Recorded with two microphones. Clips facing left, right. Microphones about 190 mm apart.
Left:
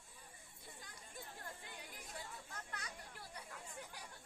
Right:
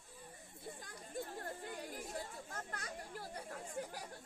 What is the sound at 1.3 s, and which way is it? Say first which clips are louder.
Chatter: right 8 dB; 50° right (ahead or behind).